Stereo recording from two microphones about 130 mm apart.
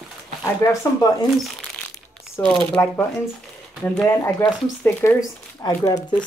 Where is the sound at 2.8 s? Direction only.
20° left (ahead or behind).